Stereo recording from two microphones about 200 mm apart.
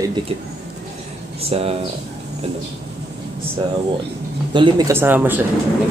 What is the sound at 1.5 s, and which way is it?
Speech, 30° right (ahead or behind).